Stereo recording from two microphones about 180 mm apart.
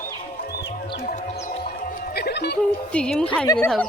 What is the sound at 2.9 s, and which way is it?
Speech, 5° left (ahead or behind).